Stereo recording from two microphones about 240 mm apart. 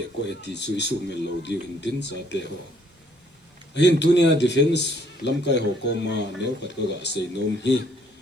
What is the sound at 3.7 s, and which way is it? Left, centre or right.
Speech, left.